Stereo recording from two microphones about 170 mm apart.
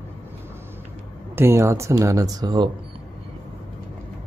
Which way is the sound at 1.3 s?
15° right (ahead or behind).